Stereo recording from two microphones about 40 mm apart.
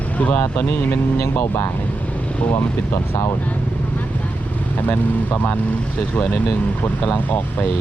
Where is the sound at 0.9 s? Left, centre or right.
Left.